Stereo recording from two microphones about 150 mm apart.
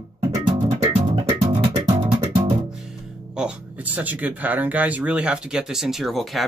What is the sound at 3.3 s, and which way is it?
Speech, 10° right (ahead or behind).